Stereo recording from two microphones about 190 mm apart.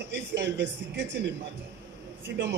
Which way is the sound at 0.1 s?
65° right (ahead or behind).